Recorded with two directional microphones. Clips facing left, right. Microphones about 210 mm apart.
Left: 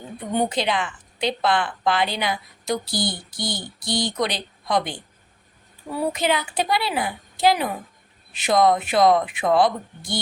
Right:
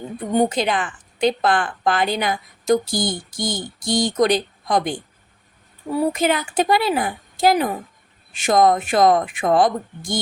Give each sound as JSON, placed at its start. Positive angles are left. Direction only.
{"t": 0.4, "sound": "a woman's voice", "side_deg": -45}
{"t": 6.1, "sound": "a woman's voice", "side_deg": -45}